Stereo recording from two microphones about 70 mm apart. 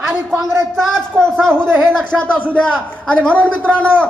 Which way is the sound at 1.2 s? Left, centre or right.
Centre.